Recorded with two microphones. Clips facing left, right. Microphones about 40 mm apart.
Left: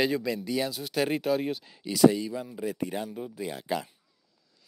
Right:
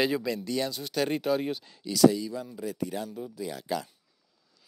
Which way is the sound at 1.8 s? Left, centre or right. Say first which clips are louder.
Even; left.